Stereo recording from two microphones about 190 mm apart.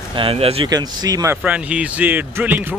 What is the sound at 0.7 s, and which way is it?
Speech, 20° right (ahead or behind).